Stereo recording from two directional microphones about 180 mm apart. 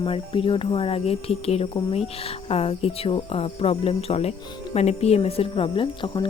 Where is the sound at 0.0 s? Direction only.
30° left (ahead or behind).